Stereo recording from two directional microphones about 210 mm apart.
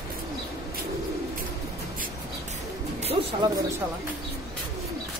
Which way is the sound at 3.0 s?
30° right (ahead or behind).